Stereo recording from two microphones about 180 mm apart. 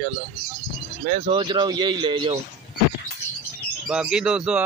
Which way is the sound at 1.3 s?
25° right (ahead or behind).